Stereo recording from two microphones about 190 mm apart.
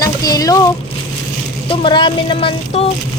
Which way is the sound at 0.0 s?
20° left (ahead or behind).